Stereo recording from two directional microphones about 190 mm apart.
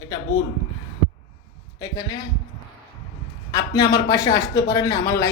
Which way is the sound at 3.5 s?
20° left (ahead or behind).